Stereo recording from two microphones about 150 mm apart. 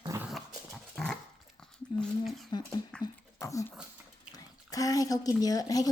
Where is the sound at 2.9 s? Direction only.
5° left (ahead or behind).